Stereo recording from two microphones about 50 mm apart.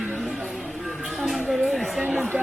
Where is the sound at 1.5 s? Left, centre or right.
Centre.